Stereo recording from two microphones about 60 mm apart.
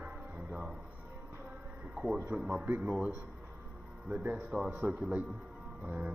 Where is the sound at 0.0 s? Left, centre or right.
Right.